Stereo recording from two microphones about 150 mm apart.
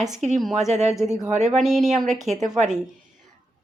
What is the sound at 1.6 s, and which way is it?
Speech, centre (ahead or behind).